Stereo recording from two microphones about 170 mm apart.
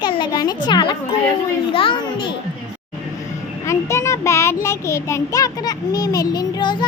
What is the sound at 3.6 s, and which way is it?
A child's voice, 15° left (ahead or behind).